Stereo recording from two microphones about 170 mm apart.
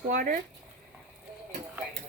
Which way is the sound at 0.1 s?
50° right (ahead or behind).